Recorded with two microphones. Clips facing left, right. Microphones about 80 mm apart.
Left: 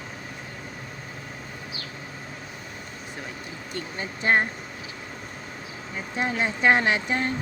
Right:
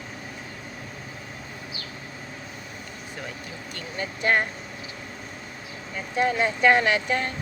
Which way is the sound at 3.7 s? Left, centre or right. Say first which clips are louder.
Even; left.